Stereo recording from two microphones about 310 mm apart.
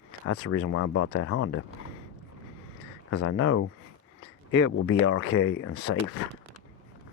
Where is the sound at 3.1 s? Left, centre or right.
Left.